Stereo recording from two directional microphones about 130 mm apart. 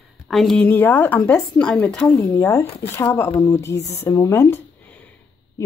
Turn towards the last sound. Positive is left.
turn(degrees=25)  # may be behind; listen again after turning